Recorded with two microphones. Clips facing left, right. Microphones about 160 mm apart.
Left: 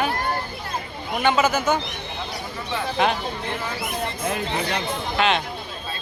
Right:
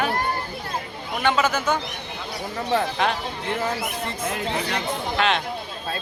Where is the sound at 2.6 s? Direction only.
45° right (ahead or behind).